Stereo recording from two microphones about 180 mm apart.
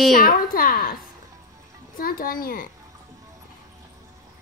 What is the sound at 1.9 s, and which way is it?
Speech, 55° left (ahead or behind).